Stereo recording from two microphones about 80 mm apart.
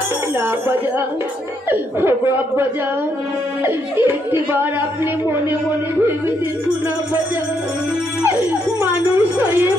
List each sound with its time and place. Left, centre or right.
1.7 s speech: right
3.6 s speech: right